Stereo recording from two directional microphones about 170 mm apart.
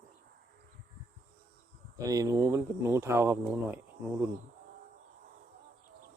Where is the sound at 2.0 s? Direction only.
20° right (ahead or behind).